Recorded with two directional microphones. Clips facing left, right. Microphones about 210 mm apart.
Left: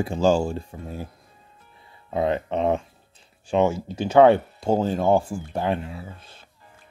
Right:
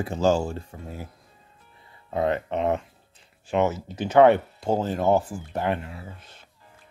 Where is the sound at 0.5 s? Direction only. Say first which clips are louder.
Left 3 dB; 25° left (ahead or behind).